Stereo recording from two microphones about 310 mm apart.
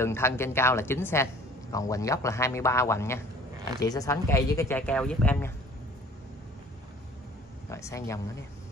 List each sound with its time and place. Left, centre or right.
0.0 s a woman's voice: centre
7.7 s a woman's voice: centre